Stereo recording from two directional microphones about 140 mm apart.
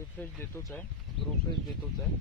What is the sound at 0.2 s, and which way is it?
Speech, 10° left (ahead or behind).